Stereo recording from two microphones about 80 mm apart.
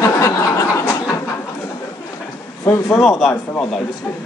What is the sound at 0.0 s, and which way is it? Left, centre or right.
Chuckle, left.